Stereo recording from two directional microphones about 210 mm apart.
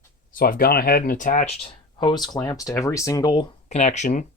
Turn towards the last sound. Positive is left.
turn(degrees=35)  # may be behind; listen again after turning